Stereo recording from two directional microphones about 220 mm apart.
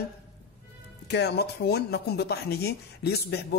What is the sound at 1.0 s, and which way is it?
Speech, 50° left (ahead or behind).